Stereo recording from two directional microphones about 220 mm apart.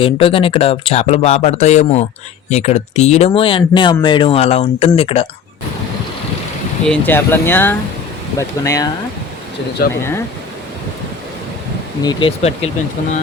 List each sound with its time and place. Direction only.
0.0 s speech: 25° left (ahead or behind)
6.8 s speech: 5° left (ahead or behind)
9.8 s speech: 45° left (ahead or behind)
12.0 s speech: 25° left (ahead or behind)